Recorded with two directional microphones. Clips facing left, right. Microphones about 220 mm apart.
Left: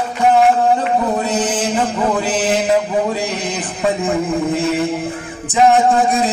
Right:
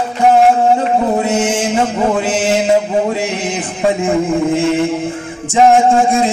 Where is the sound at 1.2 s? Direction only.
25° right (ahead or behind).